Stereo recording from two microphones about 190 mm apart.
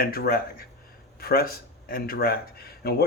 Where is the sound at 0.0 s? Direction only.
50° left (ahead or behind).